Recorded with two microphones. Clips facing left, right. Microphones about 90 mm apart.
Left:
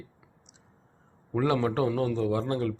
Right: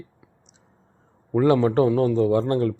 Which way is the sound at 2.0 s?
40° right (ahead or behind).